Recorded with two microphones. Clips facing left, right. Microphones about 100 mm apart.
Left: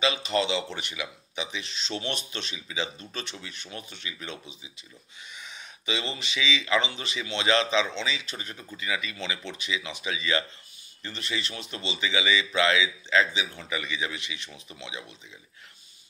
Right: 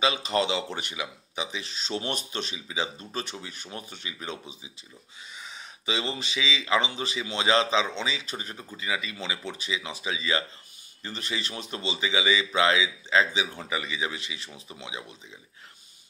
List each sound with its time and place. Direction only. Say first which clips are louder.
0.0 s a man's voice: right 1 dB; 35° right (ahead or behind)
5.9 s a man's voice: right 2 dB; 30° right (ahead or behind)
11.1 s a man's voice: even; 40° right (ahead or behind)
13.7 s speech: right 1 dB; 25° right (ahead or behind)